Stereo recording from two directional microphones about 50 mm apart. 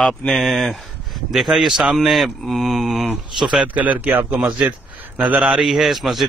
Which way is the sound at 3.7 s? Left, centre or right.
Right.